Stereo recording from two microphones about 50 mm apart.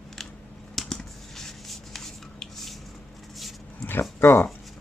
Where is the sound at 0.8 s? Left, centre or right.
Centre.